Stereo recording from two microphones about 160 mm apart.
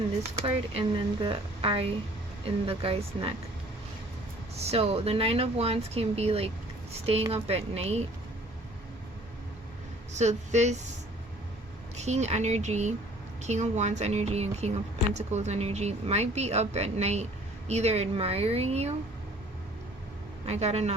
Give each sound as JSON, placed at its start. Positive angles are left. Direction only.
{"t": 0.4, "sound": "speech", "side_deg": -35}
{"t": 4.6, "sound": "speech", "side_deg": -40}
{"t": 10.1, "sound": "speech", "side_deg": -45}
{"t": 11.9, "sound": "speech", "side_deg": -45}
{"t": 20.5, "sound": "speech", "side_deg": -40}